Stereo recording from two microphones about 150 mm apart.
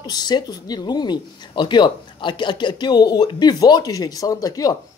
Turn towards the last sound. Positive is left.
turn(degrees=25)  # may be behind; listen again after turning